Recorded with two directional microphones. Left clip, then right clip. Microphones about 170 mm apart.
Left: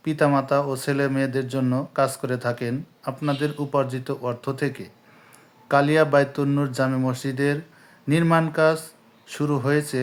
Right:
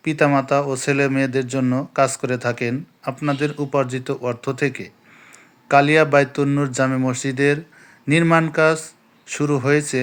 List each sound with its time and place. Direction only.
0.0 s speech: 15° right (ahead or behind)